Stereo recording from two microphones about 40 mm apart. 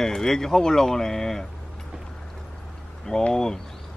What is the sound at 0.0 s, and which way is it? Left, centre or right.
Speech, centre.